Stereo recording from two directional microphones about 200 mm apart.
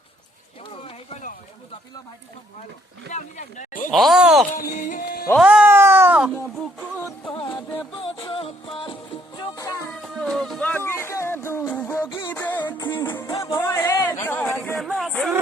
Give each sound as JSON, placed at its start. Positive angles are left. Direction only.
{"t": 0.6, "sound": "a sound", "side_deg": 25}
{"t": 3.1, "sound": "speech", "side_deg": 35}
{"t": 3.9, "sound": "speech", "side_deg": 0}
{"t": 4.7, "sound": "music", "side_deg": 40}
{"t": 5.4, "sound": "music", "side_deg": -5}
{"t": 7.3, "sound": "music", "side_deg": 25}
{"t": 9.9, "sound": "music", "side_deg": 0}
{"t": 12.0, "sound": "music", "side_deg": 20}
{"t": 12.4, "sound": "music", "side_deg": 10}
{"t": 13.4, "sound": "a sound", "side_deg": 15}